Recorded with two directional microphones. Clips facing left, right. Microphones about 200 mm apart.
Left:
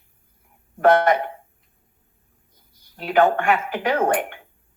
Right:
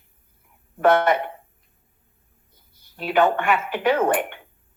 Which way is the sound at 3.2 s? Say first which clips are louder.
Left 2 dB; 45° left (ahead or behind).